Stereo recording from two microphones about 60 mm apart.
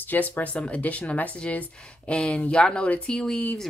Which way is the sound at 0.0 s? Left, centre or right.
Left.